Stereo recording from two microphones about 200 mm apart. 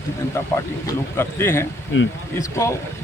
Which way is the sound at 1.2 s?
10° left (ahead or behind).